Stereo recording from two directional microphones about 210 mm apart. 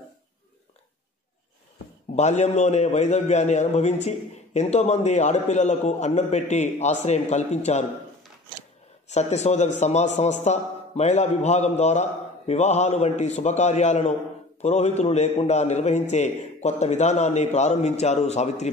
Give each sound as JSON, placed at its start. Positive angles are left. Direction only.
{"t": 2.1, "sound": "a man's voice", "side_deg": 30}
{"t": 9.1, "sound": "a man's voice", "side_deg": 30}